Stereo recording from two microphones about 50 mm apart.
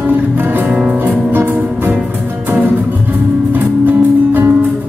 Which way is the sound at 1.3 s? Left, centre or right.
Right.